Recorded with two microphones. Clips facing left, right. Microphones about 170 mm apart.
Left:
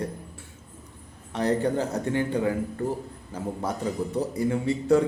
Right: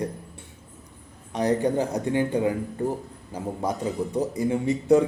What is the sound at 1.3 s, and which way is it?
A man's voice, 15° right (ahead or behind).